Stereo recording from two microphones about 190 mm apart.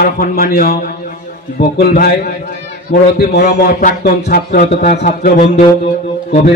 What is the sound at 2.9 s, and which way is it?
Speech, 40° left (ahead or behind).